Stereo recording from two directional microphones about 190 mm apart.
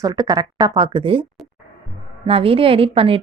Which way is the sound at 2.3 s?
30° right (ahead or behind).